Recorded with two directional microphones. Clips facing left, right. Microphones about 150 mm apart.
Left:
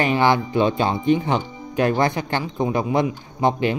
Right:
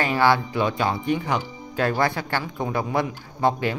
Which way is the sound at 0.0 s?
20° left (ahead or behind).